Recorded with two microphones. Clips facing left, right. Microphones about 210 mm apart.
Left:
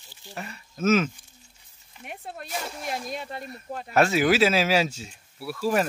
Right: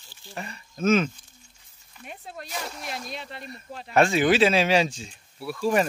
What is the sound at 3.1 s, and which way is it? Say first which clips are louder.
Speech: left 4 dB; 45° left (ahead or behind).